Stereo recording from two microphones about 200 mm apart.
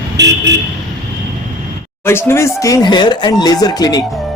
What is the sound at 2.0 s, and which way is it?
Speech, 10° left (ahead or behind).